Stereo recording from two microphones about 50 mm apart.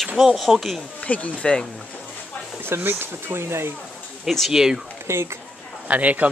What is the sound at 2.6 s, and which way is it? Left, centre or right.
Speech, right.